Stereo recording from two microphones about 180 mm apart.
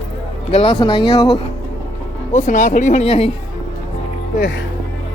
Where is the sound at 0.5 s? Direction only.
30° left (ahead or behind).